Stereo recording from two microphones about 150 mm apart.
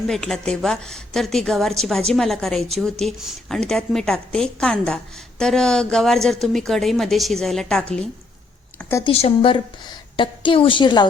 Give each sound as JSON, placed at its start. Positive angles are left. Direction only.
{"t": 0.1, "sound": "a woman's voice", "side_deg": 5}
{"t": 8.8, "sound": "speech", "side_deg": 15}
{"t": 9.0, "sound": "a woman's voice", "side_deg": 40}